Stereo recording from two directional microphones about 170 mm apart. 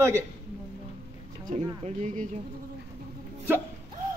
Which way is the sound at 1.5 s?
50° right (ahead or behind).